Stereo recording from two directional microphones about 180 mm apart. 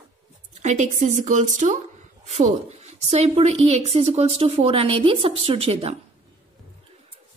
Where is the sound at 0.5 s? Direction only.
40° right (ahead or behind).